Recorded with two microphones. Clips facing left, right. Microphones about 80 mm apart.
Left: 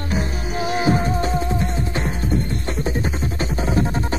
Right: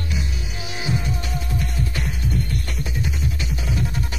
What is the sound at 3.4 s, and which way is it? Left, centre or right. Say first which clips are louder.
Music: left 10 dB; left.